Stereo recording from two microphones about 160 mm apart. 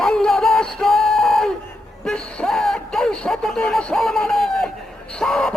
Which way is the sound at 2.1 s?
5° left (ahead or behind).